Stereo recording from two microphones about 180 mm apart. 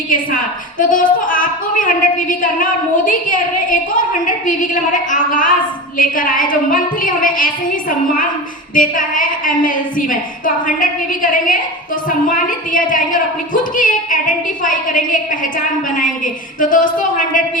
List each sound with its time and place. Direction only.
0.8 s a woman's voice: 50° left (ahead or behind)